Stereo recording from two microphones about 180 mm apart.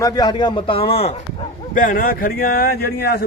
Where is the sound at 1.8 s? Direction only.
50° left (ahead or behind).